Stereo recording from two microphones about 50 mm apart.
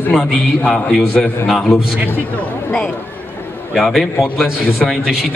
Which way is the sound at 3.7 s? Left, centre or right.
Centre.